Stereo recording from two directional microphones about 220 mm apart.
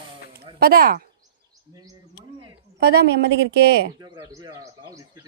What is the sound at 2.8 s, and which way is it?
Speech, 50° right (ahead or behind).